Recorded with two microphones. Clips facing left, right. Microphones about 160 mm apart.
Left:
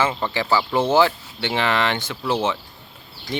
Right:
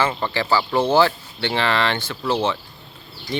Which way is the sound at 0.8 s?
20° left (ahead or behind).